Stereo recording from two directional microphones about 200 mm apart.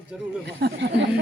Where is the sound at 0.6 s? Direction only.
60° right (ahead or behind).